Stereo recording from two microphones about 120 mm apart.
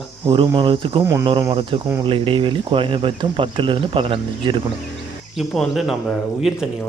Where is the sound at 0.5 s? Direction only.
45° right (ahead or behind).